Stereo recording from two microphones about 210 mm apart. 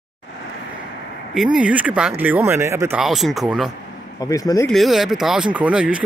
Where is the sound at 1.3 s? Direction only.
5° right (ahead or behind).